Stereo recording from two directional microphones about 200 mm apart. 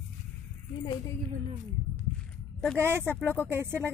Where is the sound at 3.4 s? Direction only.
10° right (ahead or behind).